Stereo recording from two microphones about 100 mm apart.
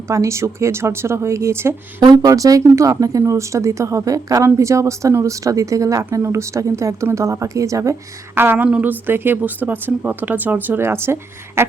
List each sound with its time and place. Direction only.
0.1 s a woman's voice: 30° right (ahead or behind)
8.4 s a woman's voice: 20° right (ahead or behind)